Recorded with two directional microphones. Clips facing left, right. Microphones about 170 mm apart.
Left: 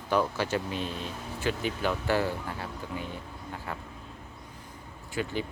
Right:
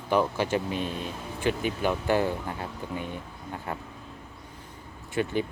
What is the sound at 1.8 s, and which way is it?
Speech, 15° right (ahead or behind).